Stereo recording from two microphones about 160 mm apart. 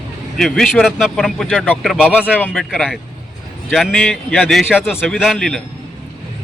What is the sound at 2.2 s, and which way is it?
A man's voice, 10° left (ahead or behind).